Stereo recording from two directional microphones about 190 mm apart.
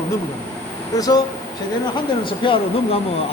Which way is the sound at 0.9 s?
20° left (ahead or behind).